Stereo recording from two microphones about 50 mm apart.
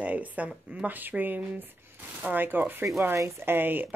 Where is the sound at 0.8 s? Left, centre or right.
Right.